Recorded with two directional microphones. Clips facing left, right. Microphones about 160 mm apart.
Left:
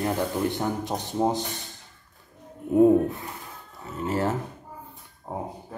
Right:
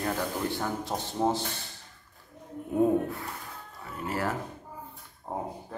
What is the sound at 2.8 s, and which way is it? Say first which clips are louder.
Speech: left 7 dB; 20° left (ahead or behind).